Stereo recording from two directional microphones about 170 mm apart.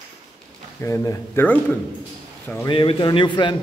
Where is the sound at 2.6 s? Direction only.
30° left (ahead or behind).